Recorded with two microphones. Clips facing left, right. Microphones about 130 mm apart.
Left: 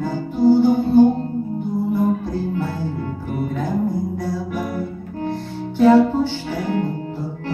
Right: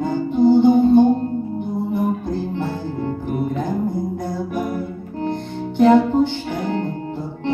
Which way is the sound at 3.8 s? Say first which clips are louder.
Left 1 dB; 20° right (ahead or behind).